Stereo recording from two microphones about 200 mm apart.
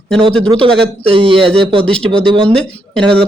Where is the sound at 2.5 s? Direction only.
5° left (ahead or behind).